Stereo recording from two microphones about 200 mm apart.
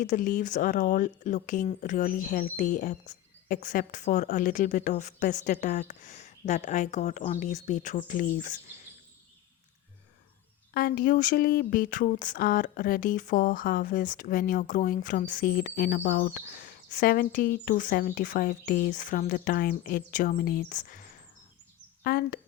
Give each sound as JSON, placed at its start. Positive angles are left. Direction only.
{"t": 0.0, "sound": "speech", "side_deg": 40}
{"t": 10.8, "sound": "speech", "side_deg": 50}